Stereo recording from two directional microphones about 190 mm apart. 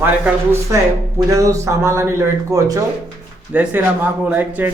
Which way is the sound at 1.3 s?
15° right (ahead or behind).